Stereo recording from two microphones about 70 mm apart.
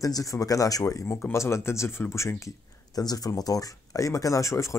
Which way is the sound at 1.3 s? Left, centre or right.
Left.